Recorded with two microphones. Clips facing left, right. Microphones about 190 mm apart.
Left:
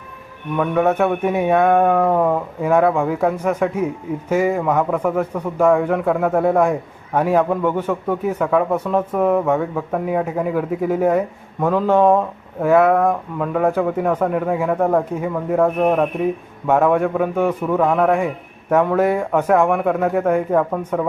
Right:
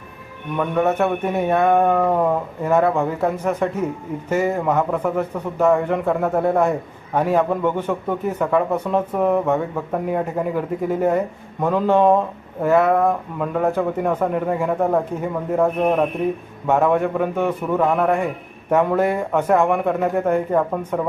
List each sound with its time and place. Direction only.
0.5 s speech: centre (ahead or behind)
14.1 s speech: 5° right (ahead or behind)
18.9 s speech: 10° left (ahead or behind)
20.5 s speech: 5° right (ahead or behind)